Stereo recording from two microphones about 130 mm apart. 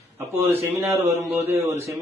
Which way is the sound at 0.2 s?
15° right (ahead or behind).